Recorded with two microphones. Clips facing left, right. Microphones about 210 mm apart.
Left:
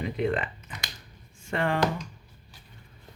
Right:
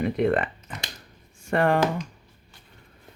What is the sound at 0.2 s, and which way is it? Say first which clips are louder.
Speech: right 2 dB; 55° right (ahead or behind).